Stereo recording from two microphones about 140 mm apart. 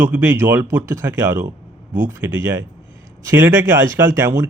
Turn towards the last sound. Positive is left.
turn(degrees=-20)  # may be behind; listen again after turning